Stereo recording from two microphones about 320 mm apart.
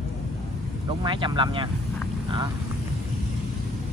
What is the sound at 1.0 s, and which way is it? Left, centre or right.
Speech, centre.